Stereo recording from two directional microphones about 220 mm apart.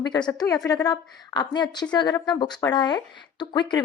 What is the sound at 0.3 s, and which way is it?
A woman's voice, 15° left (ahead or behind).